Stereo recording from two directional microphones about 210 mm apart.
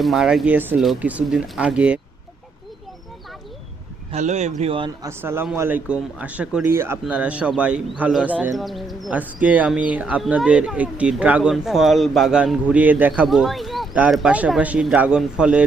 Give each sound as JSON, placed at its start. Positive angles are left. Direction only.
{"t": 0.0, "sound": "speech", "side_deg": 0}
{"t": 4.1, "sound": "speech", "side_deg": -30}
{"t": 5.0, "sound": "speech", "side_deg": -10}